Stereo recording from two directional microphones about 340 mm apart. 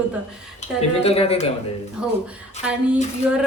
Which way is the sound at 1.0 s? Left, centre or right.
Centre.